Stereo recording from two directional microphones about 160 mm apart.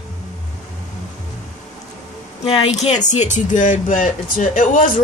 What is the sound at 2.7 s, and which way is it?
Speech, 45° left (ahead or behind).